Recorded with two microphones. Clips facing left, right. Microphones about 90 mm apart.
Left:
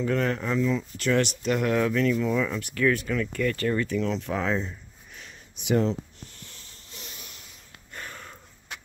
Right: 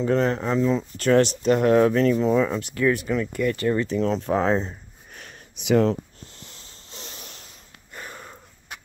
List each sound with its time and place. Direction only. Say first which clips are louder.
0.0 s speech: right 4 dB; 30° right (ahead or behind)
4.0 s speech: right 6 dB; 35° right (ahead or behind)
5.6 s speech: right 5 dB; 85° right
6.3 s a sound: right 2 dB; 25° right (ahead or behind)
7.9 s snort: right 2 dB; 15° right (ahead or behind)